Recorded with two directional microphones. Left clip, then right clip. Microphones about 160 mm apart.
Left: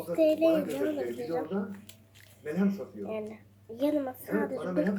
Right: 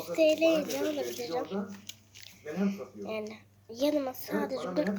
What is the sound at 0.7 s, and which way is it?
Speech, 10° right (ahead or behind).